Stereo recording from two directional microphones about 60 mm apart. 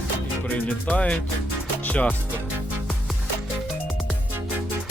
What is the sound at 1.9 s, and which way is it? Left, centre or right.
Music, left.